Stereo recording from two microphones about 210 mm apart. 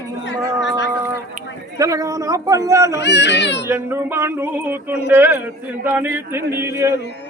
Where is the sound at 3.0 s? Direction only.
55° left (ahead or behind).